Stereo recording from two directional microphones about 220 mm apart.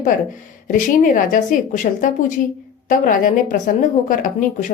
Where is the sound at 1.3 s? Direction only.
35° left (ahead or behind).